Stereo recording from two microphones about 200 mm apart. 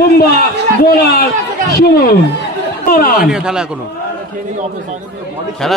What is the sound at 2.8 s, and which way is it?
Speech, 45° left (ahead or behind).